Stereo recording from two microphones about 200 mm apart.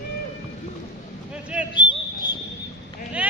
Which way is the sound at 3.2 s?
5° right (ahead or behind).